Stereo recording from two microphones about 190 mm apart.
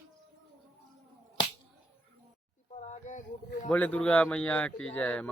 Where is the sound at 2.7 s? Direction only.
40° left (ahead or behind).